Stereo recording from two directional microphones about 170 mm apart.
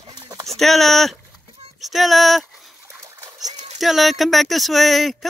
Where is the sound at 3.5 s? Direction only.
40° right (ahead or behind).